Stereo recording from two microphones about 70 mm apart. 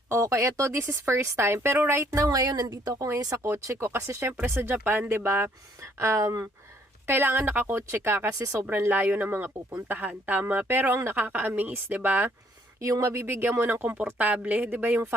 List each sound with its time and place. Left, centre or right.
0.1 s speech: right
2.2 s speech: right
2.9 s speech: right
4.4 s speech: right
7.1 s speech: right
12.8 s speech: right